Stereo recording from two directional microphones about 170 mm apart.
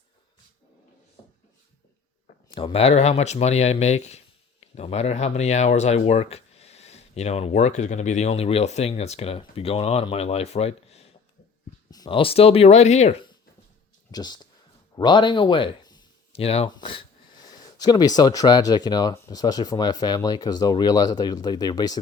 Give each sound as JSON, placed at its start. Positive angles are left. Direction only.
{"t": 2.6, "sound": "speech", "side_deg": 35}
{"t": 11.9, "sound": "speech", "side_deg": 25}
{"t": 14.1, "sound": "speech", "side_deg": 25}